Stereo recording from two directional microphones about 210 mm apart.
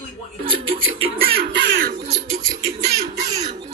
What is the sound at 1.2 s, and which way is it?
Speech, 60° right (ahead or behind).